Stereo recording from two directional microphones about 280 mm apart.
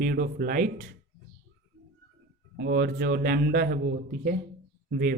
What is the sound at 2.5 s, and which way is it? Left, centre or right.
A man's voice, right.